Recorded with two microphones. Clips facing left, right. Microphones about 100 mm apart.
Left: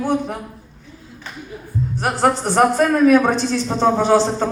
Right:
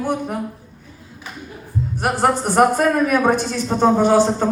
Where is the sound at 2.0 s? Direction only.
10° right (ahead or behind).